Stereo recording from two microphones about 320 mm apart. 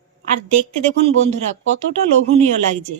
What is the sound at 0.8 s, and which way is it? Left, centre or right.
Speech, right.